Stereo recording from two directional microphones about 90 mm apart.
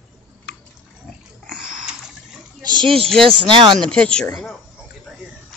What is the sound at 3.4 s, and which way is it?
Speech, 65° right (ahead or behind).